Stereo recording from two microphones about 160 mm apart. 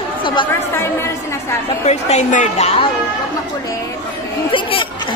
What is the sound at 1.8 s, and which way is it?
A woman's voice, 45° left (ahead or behind).